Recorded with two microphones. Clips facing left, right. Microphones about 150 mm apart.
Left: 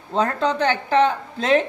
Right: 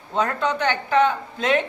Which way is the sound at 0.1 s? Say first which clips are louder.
Left 2 dB; 35° left (ahead or behind).